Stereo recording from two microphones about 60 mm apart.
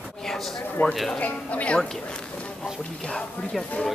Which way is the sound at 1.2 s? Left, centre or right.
Left.